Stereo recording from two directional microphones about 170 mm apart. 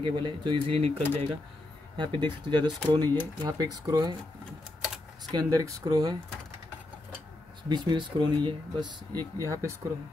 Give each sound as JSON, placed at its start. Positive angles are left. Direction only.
{"t": 0.0, "sound": "speech", "side_deg": -25}
{"t": 0.9, "sound": "speech", "side_deg": 10}
{"t": 2.0, "sound": "speech", "side_deg": -25}
{"t": 5.3, "sound": "speech", "side_deg": -20}
{"t": 7.7, "sound": "speech", "side_deg": -25}